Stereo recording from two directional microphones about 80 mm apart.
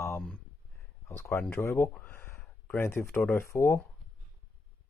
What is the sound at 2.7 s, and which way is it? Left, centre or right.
Speech, left.